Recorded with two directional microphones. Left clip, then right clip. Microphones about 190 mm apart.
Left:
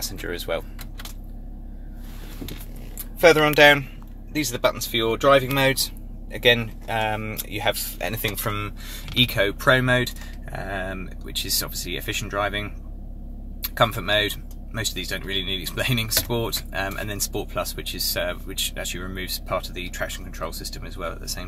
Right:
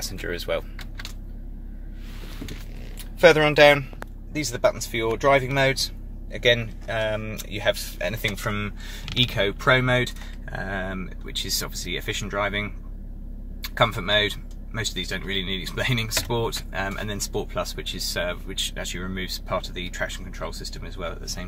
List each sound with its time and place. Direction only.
0.0 s speech: 5° right (ahead or behind)
3.2 s speech: 5° right (ahead or behind)
13.7 s speech: centre (ahead or behind)